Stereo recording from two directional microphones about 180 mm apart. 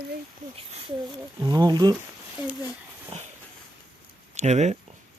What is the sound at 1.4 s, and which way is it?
Speech, 20° right (ahead or behind).